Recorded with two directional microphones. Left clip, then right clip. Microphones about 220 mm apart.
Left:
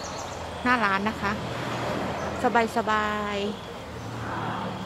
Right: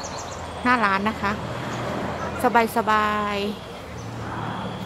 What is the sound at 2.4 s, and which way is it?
Speech, 10° right (ahead or behind).